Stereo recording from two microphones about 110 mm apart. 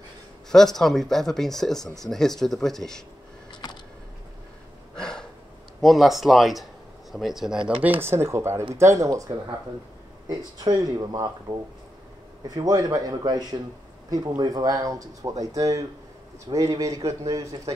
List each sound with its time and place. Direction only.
0.5 s speech: 5° left (ahead or behind)
4.9 s a sound: 5° left (ahead or behind)
5.8 s speech: centre (ahead or behind); by 9.2 s 30° right (ahead or behind)
10.2 s speech: 35° right (ahead or behind)